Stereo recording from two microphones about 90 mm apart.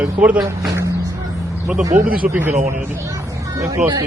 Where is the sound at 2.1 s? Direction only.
20° right (ahead or behind).